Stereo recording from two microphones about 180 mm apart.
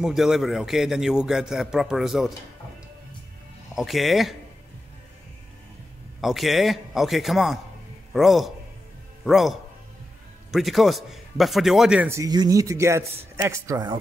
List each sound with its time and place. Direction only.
0.0 s a man's voice: centre (ahead or behind)
3.7 s a man's voice: centre (ahead or behind)
6.2 s a man's voice: centre (ahead or behind); by 13.9 s 20° right (ahead or behind)